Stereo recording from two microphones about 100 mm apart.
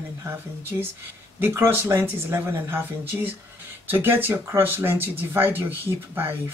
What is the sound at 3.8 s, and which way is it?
Speech, 20° right (ahead or behind).